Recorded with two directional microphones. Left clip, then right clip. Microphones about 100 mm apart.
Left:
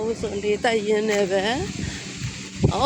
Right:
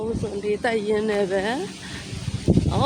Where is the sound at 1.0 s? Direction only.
10° right (ahead or behind).